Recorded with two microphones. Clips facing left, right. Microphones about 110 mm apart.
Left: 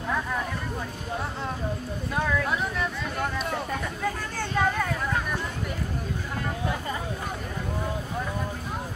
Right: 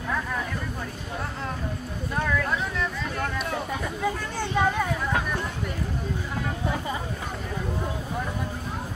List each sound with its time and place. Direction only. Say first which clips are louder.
2.1 s speech: even; 5° left (ahead or behind)